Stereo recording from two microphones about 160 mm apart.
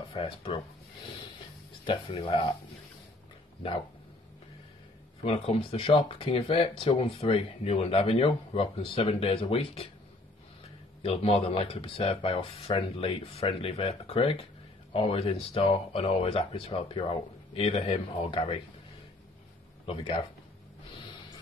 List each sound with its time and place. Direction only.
0.1 s speech: 35° left (ahead or behind)
1.9 s speech: 35° left (ahead or behind)
5.2 s speech: 35° left (ahead or behind)
11.0 s speech: 35° left (ahead or behind)
19.9 s speech: 30° left (ahead or behind)
20.9 s gasp: 30° left (ahead or behind)